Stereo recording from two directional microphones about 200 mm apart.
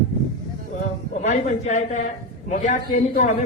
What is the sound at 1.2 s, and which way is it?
A man's voice, 35° left (ahead or behind).